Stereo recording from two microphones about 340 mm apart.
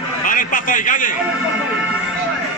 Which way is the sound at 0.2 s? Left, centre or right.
Left.